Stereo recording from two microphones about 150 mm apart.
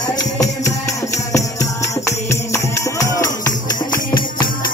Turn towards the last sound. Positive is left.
turn(degrees=20)  # may be behind; listen again after turning